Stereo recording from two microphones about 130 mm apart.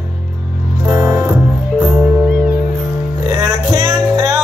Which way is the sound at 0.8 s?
25° right (ahead or behind).